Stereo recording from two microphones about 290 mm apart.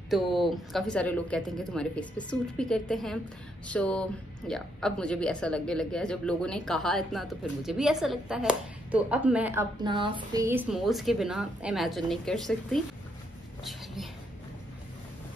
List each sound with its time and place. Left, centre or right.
0.1 s speech: centre